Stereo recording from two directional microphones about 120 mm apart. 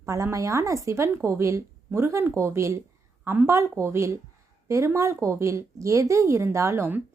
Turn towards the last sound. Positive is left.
turn(degrees=-20)  # may be behind; listen again after turning